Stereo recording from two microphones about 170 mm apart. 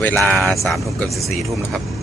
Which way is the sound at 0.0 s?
10° left (ahead or behind).